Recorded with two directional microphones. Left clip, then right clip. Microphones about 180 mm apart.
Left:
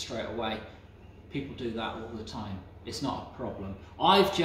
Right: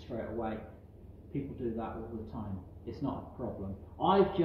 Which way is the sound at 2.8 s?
15° left (ahead or behind).